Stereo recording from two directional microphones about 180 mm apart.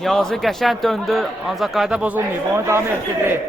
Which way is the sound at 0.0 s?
Centre (ahead or behind).